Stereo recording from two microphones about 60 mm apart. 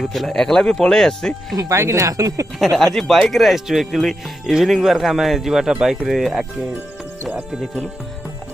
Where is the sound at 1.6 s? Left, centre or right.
Right.